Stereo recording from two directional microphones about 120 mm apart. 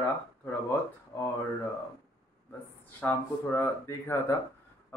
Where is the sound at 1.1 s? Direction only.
25° left (ahead or behind).